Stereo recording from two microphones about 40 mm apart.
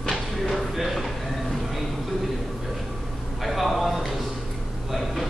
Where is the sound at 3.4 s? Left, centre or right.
Centre.